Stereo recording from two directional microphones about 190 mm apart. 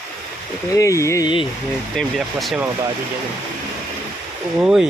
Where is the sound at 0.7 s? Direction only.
15° left (ahead or behind).